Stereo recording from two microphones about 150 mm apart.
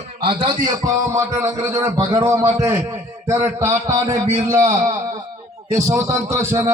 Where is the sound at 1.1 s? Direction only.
20° right (ahead or behind).